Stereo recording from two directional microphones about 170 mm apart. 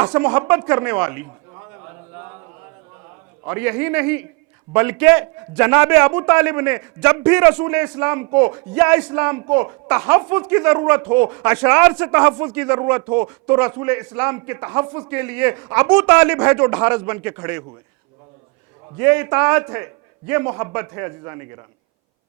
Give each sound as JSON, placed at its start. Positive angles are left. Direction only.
{"t": 0.0, "sound": "a man's voice", "side_deg": -10}
{"t": 1.5, "sound": "a sound", "side_deg": -20}
{"t": 3.4, "sound": "a man's voice", "side_deg": -15}
{"t": 18.9, "sound": "a man's voice", "side_deg": -10}